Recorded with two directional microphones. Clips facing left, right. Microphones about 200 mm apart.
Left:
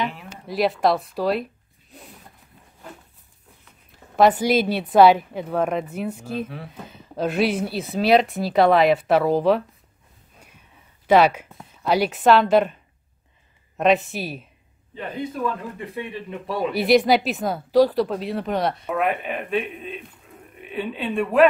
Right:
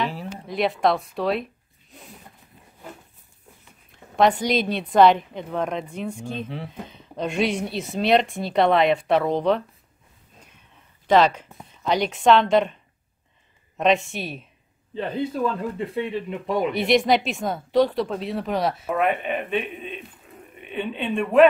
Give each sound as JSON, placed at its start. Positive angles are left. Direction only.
{"t": 0.5, "sound": "speech", "side_deg": 0}
{"t": 4.2, "sound": "speech", "side_deg": 5}
{"t": 11.1, "sound": "speech", "side_deg": 10}
{"t": 13.7, "sound": "speech", "side_deg": 0}
{"t": 15.0, "sound": "speech", "side_deg": -30}
{"t": 16.7, "sound": "speech", "side_deg": 0}